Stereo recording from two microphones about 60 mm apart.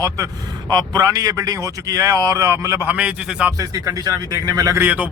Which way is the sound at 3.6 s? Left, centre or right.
Right.